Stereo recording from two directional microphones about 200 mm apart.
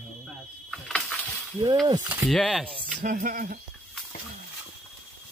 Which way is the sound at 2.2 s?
Centre (ahead or behind).